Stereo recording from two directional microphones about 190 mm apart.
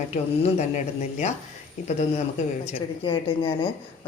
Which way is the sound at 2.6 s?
30° left (ahead or behind).